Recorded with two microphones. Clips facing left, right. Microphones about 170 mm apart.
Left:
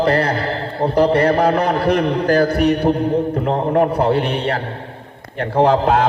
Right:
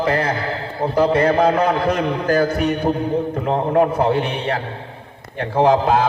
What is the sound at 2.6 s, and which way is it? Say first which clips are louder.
A man's voice: left 4 dB; 55° left (ahead or behind).